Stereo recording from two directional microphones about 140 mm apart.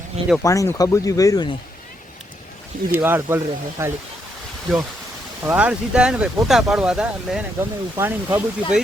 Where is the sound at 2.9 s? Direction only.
15° right (ahead or behind).